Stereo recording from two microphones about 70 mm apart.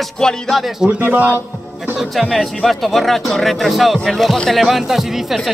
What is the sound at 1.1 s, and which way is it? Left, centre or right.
Speech, right.